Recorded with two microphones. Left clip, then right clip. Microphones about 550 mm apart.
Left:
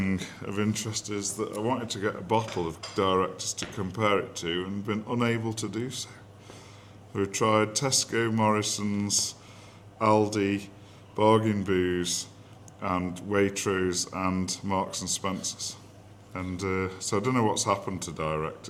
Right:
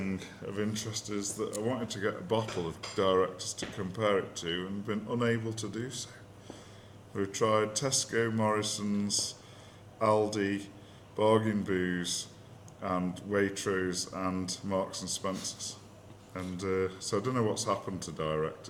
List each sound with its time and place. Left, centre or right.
0.0 s speech: left
7.2 s speech: left